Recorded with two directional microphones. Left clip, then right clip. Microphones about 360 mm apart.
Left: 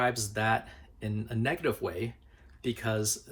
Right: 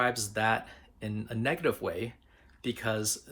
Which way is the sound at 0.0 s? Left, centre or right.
Centre.